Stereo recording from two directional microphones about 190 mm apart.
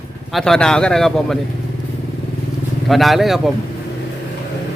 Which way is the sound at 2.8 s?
Centre (ahead or behind).